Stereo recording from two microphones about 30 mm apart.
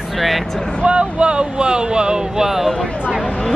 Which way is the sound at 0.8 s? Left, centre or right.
Right.